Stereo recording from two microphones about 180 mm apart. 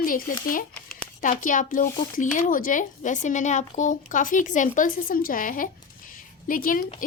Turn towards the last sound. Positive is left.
turn(degrees=50)  # may be behind; listen again after turning